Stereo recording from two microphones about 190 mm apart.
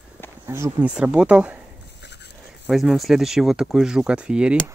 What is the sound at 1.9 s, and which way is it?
Dog, 65° left (ahead or behind).